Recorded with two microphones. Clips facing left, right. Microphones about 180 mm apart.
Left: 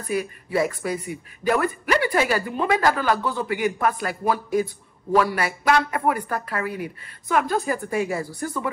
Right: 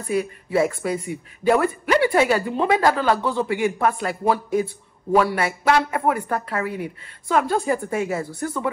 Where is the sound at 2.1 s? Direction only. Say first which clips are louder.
Right 3 dB; 25° right (ahead or behind).